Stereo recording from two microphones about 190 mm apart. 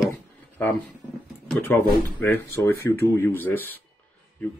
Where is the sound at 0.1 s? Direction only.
15° left (ahead or behind).